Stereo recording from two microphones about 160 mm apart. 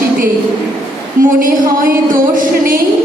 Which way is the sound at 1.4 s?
60° right (ahead or behind).